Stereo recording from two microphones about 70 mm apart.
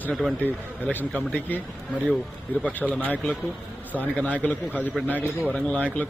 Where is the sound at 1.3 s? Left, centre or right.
Left.